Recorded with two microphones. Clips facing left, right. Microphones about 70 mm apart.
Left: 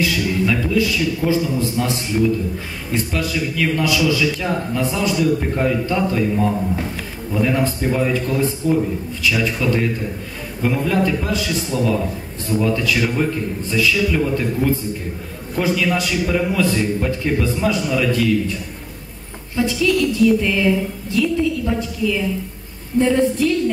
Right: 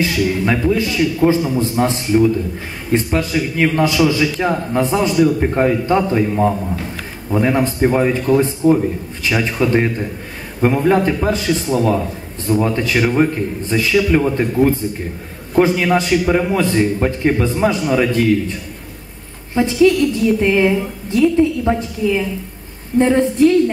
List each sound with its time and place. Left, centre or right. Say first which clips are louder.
0.0 s a man's voice: right 2 dB; right
19.5 s a man's voice: right 5 dB; right